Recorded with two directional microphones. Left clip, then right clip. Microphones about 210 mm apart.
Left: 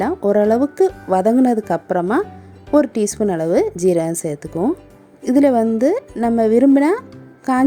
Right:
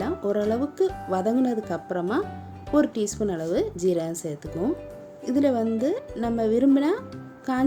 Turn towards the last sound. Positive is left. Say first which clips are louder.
# left 9 dB
turn(degrees=40)  # may be behind; listen again after turning